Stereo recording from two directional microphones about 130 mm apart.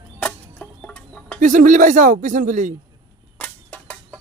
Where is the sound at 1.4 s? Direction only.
85° right.